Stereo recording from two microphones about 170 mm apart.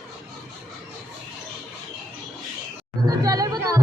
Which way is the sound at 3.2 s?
20° right (ahead or behind).